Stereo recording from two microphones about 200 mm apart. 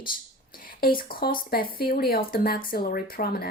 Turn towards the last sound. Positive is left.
turn(degrees=50)  # may be behind; listen again after turning